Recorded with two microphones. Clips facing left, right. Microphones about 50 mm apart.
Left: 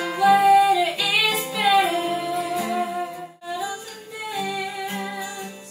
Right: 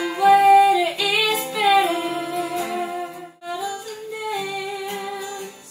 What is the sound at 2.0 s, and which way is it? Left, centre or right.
Music, centre.